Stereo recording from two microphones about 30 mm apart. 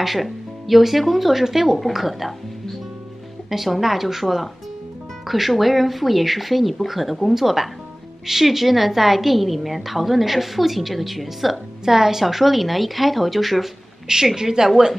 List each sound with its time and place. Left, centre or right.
0.0 s a woman's voice: centre
3.4 s a woman's voice: centre
14.0 s a woman's voice: centre